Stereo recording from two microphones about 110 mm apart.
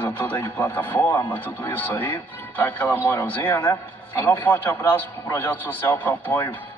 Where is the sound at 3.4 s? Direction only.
40° left (ahead or behind).